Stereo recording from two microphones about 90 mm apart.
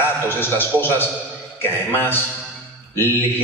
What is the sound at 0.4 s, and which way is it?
A man's voice, 25° left (ahead or behind).